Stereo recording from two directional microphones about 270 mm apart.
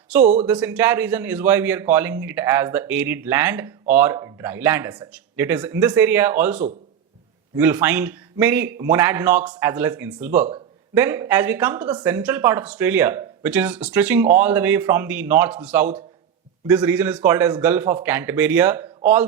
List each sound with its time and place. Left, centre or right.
0.1 s a man's voice: centre